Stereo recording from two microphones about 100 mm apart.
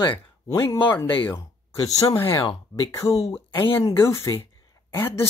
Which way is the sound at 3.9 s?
30° left (ahead or behind).